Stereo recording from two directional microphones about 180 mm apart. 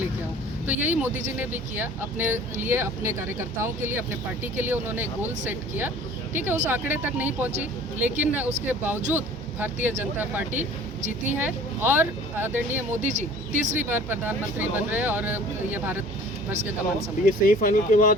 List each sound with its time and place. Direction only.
0.7 s speech: 10° right (ahead or behind)
10.5 s speech: 40° right (ahead or behind)
11.3 s speech: 10° right (ahead or behind)
13.0 s speech: 40° right (ahead or behind)
13.9 s speech: 10° right (ahead or behind)
17.2 s speech: 50° left (ahead or behind)